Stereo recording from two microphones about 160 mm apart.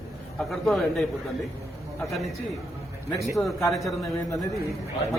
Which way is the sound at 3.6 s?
Centre (ahead or behind).